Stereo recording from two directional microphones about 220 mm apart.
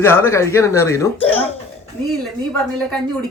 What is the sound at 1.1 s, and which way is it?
Speech, 25° left (ahead or behind).